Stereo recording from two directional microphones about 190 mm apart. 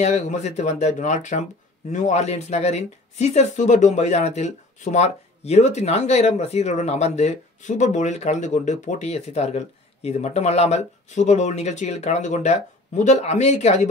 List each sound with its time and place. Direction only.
0.0 s speech: 35° left (ahead or behind)